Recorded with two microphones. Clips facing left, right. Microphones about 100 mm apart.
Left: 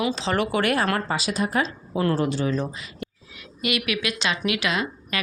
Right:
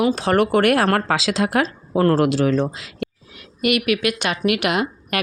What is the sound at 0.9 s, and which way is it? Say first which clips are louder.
Speech: right 6 dB; 90° right.